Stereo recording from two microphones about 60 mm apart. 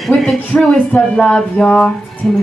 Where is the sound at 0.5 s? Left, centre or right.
Left.